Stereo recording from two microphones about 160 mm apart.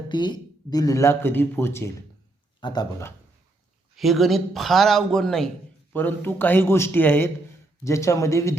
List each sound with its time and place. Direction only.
0.1 s speech: 30° left (ahead or behind)
2.6 s speech: 30° left (ahead or behind)
3.9 s a man's voice: centre (ahead or behind); by 8.5 s 20° left (ahead or behind)